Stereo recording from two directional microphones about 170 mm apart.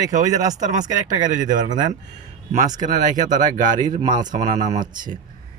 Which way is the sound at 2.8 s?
45° right (ahead or behind).